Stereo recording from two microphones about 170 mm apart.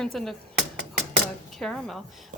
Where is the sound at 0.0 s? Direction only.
Centre (ahead or behind).